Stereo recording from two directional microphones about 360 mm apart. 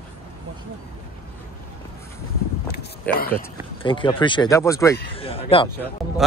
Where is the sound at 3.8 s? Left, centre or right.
Centre.